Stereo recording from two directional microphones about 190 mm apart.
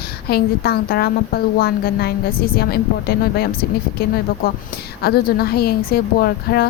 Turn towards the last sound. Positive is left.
turn(degrees=55)  # may be behind; listen again after turning